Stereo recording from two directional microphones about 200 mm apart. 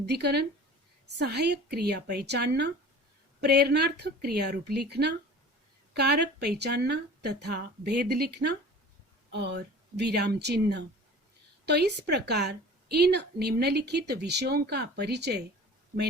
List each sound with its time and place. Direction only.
0.0 s a woman's voice: 55° right (ahead or behind)